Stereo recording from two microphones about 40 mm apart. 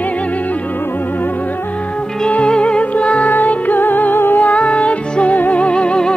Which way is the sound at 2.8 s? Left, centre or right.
Left.